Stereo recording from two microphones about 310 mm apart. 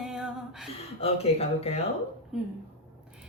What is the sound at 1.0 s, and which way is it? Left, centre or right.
Speech, centre.